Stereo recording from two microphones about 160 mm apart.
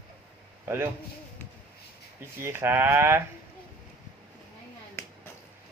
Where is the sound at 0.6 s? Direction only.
15° right (ahead or behind).